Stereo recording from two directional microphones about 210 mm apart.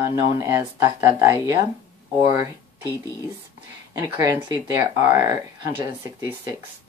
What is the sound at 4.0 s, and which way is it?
Speech, 15° right (ahead or behind).